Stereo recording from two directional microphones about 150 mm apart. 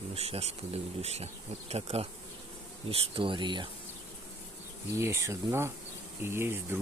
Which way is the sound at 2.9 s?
35° right (ahead or behind).